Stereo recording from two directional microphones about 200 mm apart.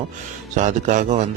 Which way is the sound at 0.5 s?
40° right (ahead or behind).